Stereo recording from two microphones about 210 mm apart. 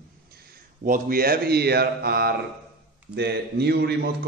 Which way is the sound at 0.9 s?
45° right (ahead or behind).